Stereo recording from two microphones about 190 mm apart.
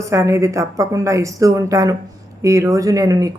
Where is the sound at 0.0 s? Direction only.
15° right (ahead or behind).